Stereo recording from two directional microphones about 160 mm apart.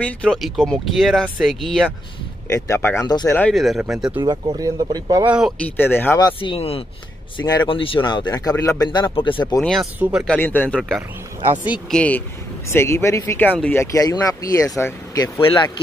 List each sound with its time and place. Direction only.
0.0 s speech: 5° left (ahead or behind)
2.4 s speech: 15° left (ahead or behind)
3.3 s speech: 5° left (ahead or behind)
4.1 s speech: 30° right (ahead or behind)
5.2 s speech: 10° right (ahead or behind)
5.6 s speech: 10° left (ahead or behind); by 9.6 s 30° left (ahead or behind)
9.6 s speech: 5° left (ahead or behind)
11.9 s speech: 10° left (ahead or behind)